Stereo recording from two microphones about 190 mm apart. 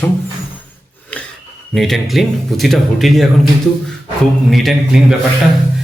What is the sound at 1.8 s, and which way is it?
Speech, centre (ahead or behind).